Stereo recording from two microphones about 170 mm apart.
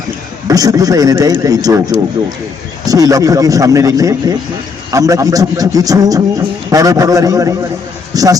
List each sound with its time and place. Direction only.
0.4 s a man's voice: 20° right (ahead or behind)